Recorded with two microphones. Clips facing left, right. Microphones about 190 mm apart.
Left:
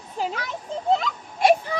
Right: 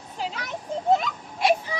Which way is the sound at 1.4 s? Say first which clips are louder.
Left 4 dB; 50° left (ahead or behind).